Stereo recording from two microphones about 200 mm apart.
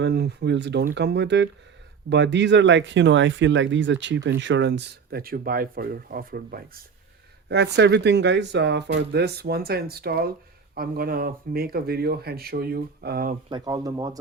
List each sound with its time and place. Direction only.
0.0 s speech: 55° right (ahead or behind)
7.4 s speech: 60° right (ahead or behind)
13.5 s speech: 20° right (ahead or behind)